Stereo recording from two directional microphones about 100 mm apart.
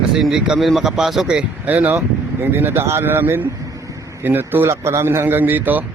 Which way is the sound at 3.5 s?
35° right (ahead or behind).